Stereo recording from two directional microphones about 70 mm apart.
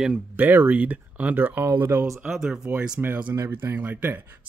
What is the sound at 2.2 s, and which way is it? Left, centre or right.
Speech, centre.